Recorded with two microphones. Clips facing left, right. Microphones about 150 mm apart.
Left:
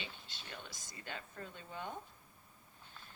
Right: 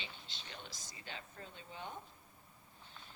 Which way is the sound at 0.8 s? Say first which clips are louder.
Left 3 dB; 50° left (ahead or behind).